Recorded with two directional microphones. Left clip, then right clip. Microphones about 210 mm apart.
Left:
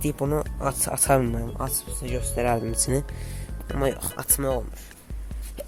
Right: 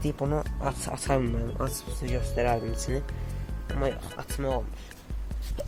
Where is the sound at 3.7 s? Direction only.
50° left (ahead or behind).